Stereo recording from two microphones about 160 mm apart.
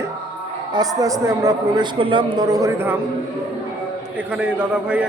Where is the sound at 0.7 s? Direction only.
25° right (ahead or behind).